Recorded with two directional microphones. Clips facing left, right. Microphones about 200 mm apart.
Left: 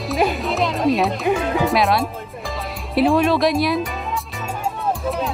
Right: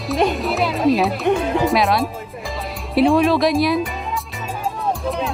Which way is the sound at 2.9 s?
Centre (ahead or behind).